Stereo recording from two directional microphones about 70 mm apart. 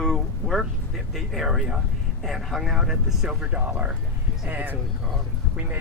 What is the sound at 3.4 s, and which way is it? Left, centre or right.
Speech, centre.